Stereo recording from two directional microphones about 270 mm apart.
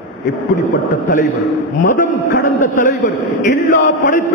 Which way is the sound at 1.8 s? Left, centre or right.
Left.